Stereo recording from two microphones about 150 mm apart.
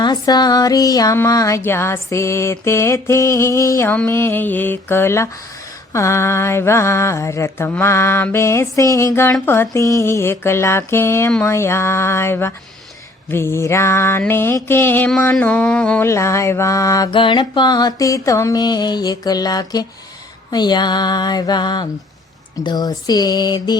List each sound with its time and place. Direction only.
0.0 s female singing: 30° left (ahead or behind)
3.9 s a sound: 15° left (ahead or behind)
16.0 s female singing: 20° left (ahead or behind)
17.1 s female singing: 35° left (ahead or behind)